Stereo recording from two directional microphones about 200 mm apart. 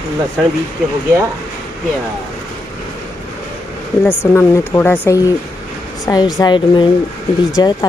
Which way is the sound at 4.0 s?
10° left (ahead or behind).